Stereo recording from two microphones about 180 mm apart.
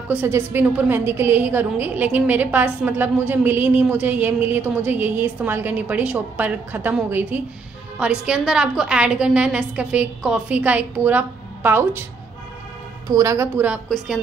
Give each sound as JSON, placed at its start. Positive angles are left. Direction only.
{"t": 0.1, "sound": "a woman's voice", "side_deg": -10}
{"t": 13.1, "sound": "a woman's voice", "side_deg": -15}
{"t": 13.8, "sound": "a woman's voice", "side_deg": 0}